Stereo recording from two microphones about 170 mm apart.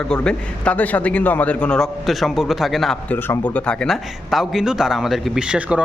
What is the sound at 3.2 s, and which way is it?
Speech, 10° left (ahead or behind).